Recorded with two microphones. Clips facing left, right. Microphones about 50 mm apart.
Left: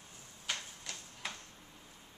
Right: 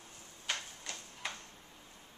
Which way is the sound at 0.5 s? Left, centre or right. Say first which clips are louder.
Right 1 dB; centre.